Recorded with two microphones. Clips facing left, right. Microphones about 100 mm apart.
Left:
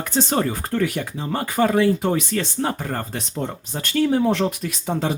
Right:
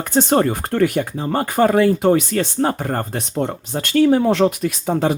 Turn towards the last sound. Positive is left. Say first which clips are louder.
# right 5 dB
turn(degrees=-55)  # may be behind; listen again after turning